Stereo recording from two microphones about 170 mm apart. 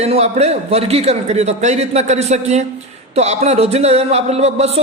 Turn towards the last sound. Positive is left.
turn(degrees=-40)  # may be behind; listen again after turning